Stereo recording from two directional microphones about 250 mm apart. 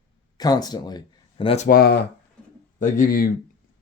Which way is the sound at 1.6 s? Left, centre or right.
Left.